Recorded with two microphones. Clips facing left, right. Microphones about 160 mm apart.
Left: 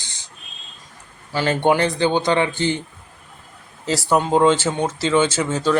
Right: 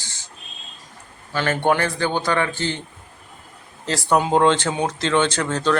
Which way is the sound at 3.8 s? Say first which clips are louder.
Left 1 dB; 5° left (ahead or behind).